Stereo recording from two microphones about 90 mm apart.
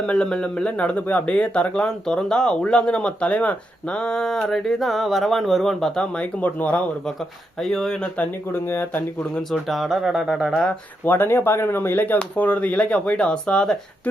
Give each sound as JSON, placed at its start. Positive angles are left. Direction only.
{"t": 0.1, "sound": "speech", "side_deg": 10}
{"t": 6.4, "sound": "speech", "side_deg": 20}
{"t": 7.6, "sound": "speech", "side_deg": 5}
{"t": 8.2, "sound": "speech", "side_deg": 20}
{"t": 9.5, "sound": "speech", "side_deg": 0}
{"t": 11.0, "sound": "speech", "side_deg": 25}